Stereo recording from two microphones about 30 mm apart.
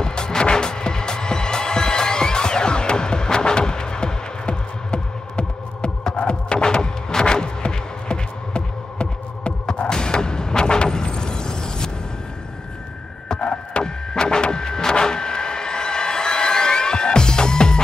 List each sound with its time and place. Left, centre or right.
0.0 s music: left
6.6 s music: left
9.8 s a sound: left
13.4 s music: left
14.3 s music: left